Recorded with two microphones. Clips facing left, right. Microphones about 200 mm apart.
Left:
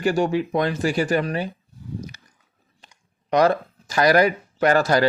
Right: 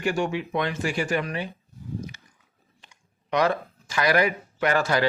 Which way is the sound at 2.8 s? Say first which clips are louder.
Left 3 dB; 40° left (ahead or behind).